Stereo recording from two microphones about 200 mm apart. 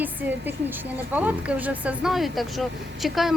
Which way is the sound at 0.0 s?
10° right (ahead or behind).